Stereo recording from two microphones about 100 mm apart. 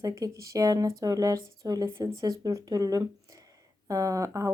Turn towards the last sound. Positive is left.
turn(degrees=-35)  # may be behind; listen again after turning